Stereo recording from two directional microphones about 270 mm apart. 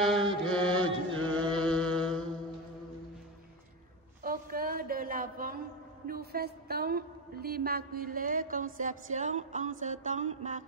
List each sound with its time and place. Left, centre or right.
0.0 s mantra: centre
4.2 s a sound: right
6.0 s a woman's voice: right
8.7 s music: right